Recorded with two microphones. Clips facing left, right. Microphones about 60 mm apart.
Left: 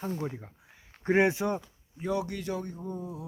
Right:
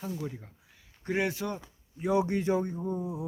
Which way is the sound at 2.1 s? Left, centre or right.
Right.